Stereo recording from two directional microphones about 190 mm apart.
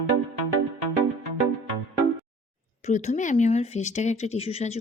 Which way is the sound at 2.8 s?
35° left (ahead or behind).